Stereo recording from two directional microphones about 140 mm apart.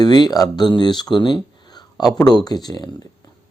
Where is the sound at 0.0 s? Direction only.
30° left (ahead or behind).